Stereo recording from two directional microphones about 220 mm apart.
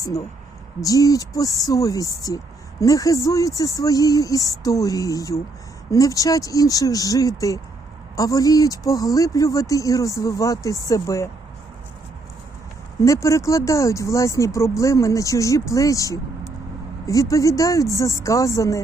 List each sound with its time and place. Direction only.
0.8 s speech: 15° left (ahead or behind)
13.0 s speech: 15° left (ahead or behind)